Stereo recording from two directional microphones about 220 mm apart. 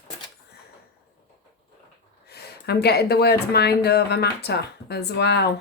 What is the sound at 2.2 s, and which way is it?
Speech, 45° left (ahead or behind).